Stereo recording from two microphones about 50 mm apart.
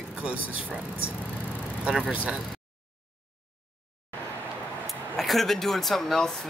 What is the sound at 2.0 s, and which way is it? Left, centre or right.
Speech, centre.